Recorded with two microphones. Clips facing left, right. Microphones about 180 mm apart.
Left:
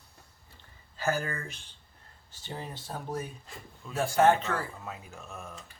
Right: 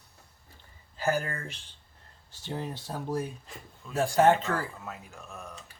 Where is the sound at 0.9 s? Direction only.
15° right (ahead or behind).